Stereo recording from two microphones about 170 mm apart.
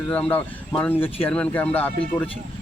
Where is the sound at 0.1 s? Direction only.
10° left (ahead or behind).